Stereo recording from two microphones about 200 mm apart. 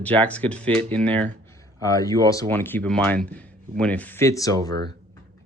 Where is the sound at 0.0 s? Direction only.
5° left (ahead or behind).